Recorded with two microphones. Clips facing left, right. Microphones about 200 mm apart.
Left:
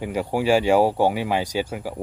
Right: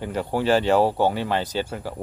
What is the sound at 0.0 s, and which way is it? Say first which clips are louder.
Speech: left 1 dB; 10° left (ahead or behind).